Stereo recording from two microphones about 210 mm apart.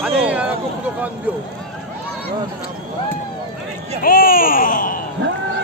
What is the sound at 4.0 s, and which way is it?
Speech, 45° left (ahead or behind).